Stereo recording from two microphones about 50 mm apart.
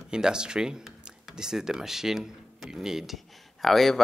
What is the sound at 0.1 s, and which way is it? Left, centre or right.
Speech, centre.